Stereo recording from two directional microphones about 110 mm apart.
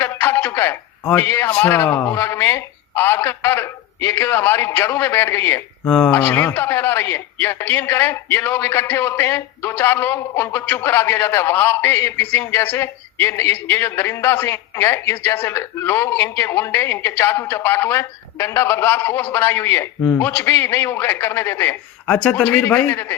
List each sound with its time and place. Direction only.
0.0 s a sound: 20° left (ahead or behind)
1.6 s speech: 20° left (ahead or behind)
5.8 s speech: 10° left (ahead or behind)
22.0 s speech: 5° left (ahead or behind)